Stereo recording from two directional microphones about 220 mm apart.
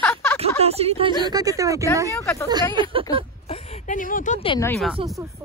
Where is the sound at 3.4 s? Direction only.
30° left (ahead or behind).